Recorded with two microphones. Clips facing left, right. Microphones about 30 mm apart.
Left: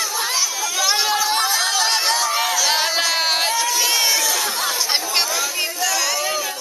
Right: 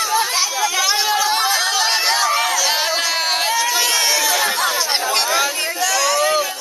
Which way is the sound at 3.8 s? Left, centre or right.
Centre.